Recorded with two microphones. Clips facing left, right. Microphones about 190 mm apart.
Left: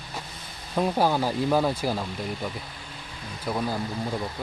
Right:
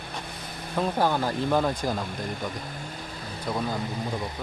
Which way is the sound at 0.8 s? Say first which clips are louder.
Left 2 dB; 10° left (ahead or behind).